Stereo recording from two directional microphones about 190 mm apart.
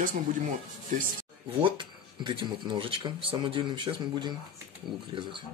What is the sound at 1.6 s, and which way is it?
Speech, 25° right (ahead or behind).